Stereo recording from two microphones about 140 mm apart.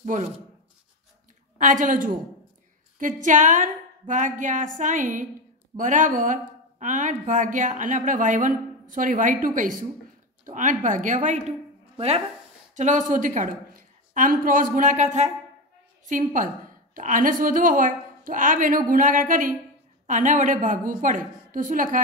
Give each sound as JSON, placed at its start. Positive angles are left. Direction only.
{"t": 0.0, "sound": "a woman's voice", "side_deg": -60}
{"t": 1.6, "sound": "a woman's voice", "side_deg": -65}
{"t": 10.4, "sound": "a woman's voice", "side_deg": -65}
{"t": 12.7, "sound": "a woman's voice", "side_deg": -65}
{"t": 14.1, "sound": "speech", "side_deg": -75}
{"t": 16.1, "sound": "speech", "side_deg": -65}